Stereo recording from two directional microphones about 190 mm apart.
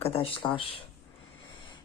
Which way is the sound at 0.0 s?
30° left (ahead or behind).